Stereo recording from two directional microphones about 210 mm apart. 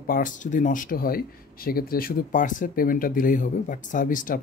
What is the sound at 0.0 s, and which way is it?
Speech, 40° left (ahead or behind).